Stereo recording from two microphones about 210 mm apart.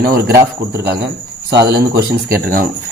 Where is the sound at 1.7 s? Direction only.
45° right (ahead or behind).